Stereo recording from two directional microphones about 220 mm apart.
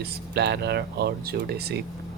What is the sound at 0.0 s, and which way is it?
Speech, 50° right (ahead or behind).